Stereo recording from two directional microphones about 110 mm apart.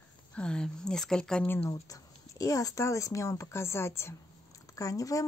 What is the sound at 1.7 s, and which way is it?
Speech, 30° left (ahead or behind).